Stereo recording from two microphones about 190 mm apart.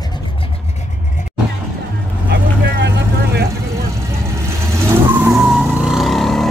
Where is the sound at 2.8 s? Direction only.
60° right (ahead or behind).